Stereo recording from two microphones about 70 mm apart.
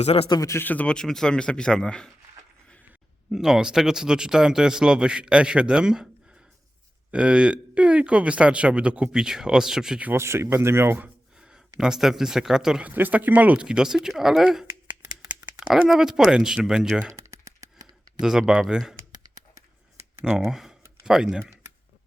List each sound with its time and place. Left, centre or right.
0.6 s speech: left
0.9 s speech: centre
3.3 s speech: centre
7.1 s speech: centre
10.2 s speech: right
11.3 s speech: centre
12.8 s speech: right; by 14.7 s centre
14.8 s a sound: centre
15.9 s speech: centre
17.1 s typing: right
18.2 s speech: centre
20.5 s speech: centre